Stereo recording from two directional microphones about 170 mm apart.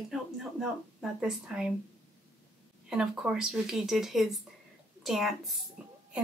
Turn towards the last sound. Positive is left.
turn(degrees=0)  # may be behind; listen again after turning